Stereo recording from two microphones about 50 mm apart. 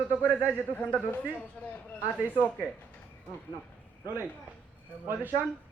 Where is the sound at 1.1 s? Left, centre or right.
Left.